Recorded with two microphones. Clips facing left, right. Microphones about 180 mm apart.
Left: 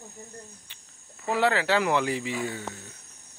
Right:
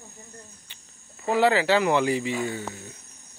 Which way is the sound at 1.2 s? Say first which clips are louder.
Right 4 dB; centre (ahead or behind).